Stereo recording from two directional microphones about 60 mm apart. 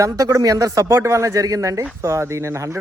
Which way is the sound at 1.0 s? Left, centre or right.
Right.